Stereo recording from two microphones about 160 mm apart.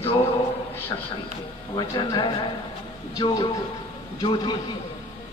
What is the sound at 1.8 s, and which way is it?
A man's voice, 30° left (ahead or behind).